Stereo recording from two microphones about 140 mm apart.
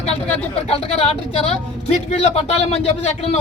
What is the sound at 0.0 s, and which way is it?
Speech, 45° left (ahead or behind).